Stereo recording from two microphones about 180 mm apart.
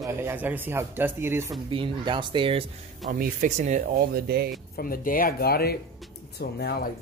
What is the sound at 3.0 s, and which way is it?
A man's voice, 50° right (ahead or behind).